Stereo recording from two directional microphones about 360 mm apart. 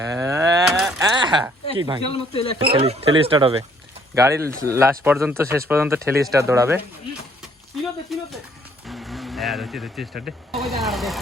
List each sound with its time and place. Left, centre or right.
0.0 s a sound: centre
1.7 s speech: centre
2.1 s speech: centre
2.6 s speech: centre
8.9 s vehicle: centre
10.5 s speech: centre